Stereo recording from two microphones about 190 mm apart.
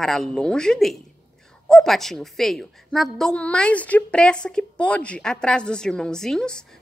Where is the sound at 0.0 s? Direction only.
Centre (ahead or behind).